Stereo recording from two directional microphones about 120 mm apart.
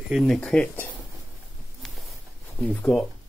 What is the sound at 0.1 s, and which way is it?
Speech, 5° right (ahead or behind).